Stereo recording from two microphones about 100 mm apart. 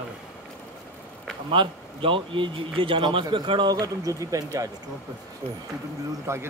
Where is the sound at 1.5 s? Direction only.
60° right (ahead or behind); by 4.7 s 30° right (ahead or behind).